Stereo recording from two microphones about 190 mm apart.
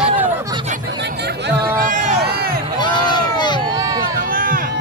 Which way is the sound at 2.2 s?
55° right (ahead or behind).